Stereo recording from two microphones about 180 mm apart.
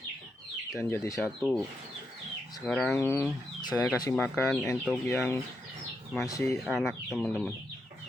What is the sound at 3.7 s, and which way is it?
Speech, 5° right (ahead or behind).